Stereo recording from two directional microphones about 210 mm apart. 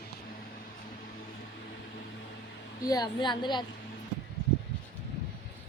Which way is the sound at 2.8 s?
20° left (ahead or behind).